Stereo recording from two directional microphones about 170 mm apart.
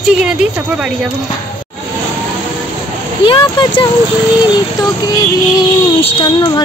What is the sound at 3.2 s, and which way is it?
Child singing, 30° left (ahead or behind).